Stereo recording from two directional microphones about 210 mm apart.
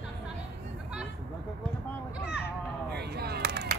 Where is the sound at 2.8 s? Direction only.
50° right (ahead or behind).